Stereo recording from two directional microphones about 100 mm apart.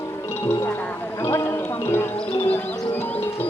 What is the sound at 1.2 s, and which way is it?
Music, 25° left (ahead or behind).